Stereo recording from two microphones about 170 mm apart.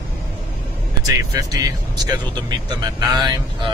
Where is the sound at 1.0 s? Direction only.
20° right (ahead or behind).